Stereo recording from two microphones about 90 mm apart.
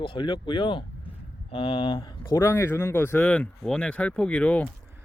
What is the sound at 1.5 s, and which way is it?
Speech, 80° left.